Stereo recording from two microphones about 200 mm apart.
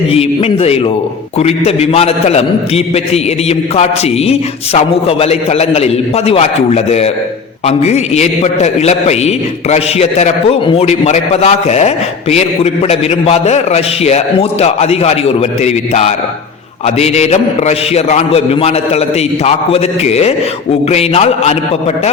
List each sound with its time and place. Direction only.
0.1 s a man's voice: 30° left (ahead or behind)